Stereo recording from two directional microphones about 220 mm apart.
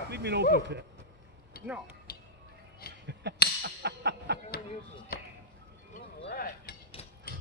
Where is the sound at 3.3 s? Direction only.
50° right (ahead or behind).